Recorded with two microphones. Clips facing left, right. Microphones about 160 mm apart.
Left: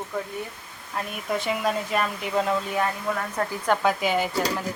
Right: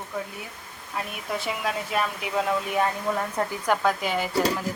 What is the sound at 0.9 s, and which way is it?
Speech, centre (ahead or behind).